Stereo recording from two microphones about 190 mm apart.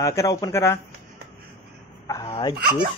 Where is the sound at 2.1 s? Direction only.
20° left (ahead or behind).